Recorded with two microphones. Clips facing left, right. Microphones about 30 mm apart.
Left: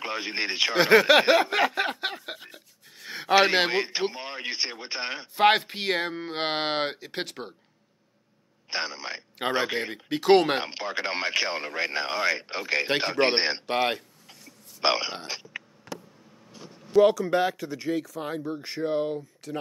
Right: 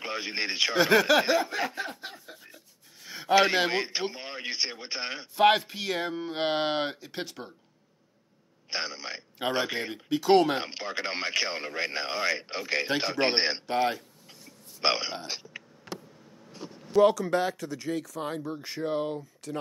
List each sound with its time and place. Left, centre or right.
0.0 s speech: centre
0.7 s speech: left
1.1 s a sound: left
3.7 s speech: centre
5.4 s speech: left
8.6 s speech: centre
10.0 s speech: left
10.6 s speech: centre
13.7 s speech: left
14.8 s speech: centre
16.9 s speech: centre
17.3 s speech: centre